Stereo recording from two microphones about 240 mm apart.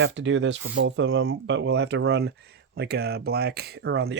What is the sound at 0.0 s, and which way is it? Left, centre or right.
Speech, right.